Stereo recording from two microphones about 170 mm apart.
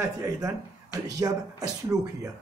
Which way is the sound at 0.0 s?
20° right (ahead or behind).